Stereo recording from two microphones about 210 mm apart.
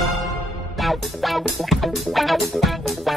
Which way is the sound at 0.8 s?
Centre (ahead or behind).